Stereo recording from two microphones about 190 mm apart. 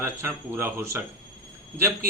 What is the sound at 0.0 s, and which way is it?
A man's voice, 15° right (ahead or behind).